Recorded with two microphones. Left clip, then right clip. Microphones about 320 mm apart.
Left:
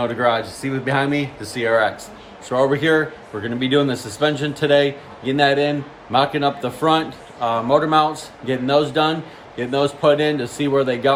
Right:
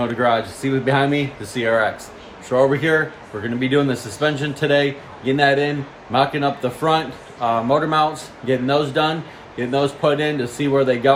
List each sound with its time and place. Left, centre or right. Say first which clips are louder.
0.0 s speech: even; centre